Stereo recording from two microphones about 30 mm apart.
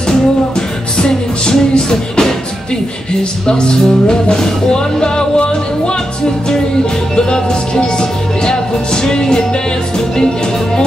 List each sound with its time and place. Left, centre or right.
0.1 s music: left
3.4 s music: left
7.2 s music: left